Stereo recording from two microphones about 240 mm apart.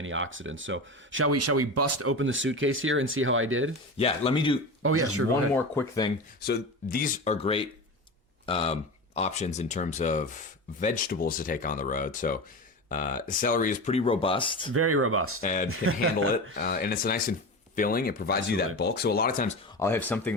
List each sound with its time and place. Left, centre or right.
0.0 s speech: right
1.3 s speech: right
2.1 s speech: right
3.9 s speech: left
4.8 s speech: right
5.5 s speech: centre
6.4 s speech: left
14.7 s speech: right
15.4 s speech: left
15.8 s speech: right
16.6 s speech: left
19.7 s speech: centre